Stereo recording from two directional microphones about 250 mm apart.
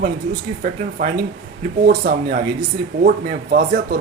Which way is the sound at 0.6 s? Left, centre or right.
Right.